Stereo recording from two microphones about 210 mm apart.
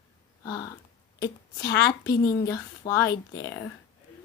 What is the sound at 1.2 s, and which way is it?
A woman's voice, 20° left (ahead or behind).